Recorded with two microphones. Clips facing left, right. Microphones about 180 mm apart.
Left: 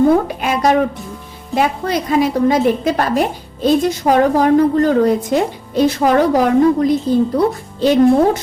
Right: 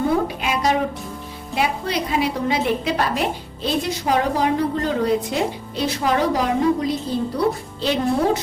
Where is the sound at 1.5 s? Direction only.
45° left (ahead or behind).